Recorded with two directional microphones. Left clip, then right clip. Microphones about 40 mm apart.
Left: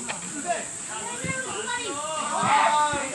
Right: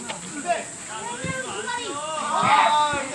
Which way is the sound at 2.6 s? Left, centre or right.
Centre.